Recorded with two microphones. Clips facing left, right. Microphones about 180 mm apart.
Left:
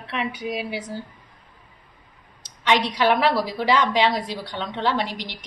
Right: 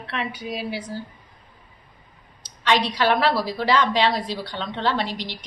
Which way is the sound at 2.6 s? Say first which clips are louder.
Left 1 dB; 20° left (ahead or behind).